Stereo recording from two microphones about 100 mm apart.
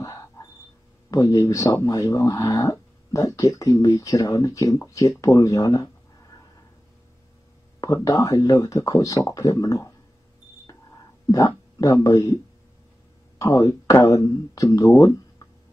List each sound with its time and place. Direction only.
0.0 s a sound: 35° left (ahead or behind)
1.1 s speech: 35° left (ahead or behind)
7.8 s speech: 35° left (ahead or behind)
11.3 s speech: 35° left (ahead or behind)
13.4 s speech: 35° left (ahead or behind)